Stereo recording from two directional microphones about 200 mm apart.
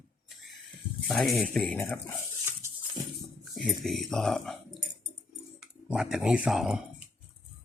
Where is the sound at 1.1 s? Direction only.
Centre (ahead or behind).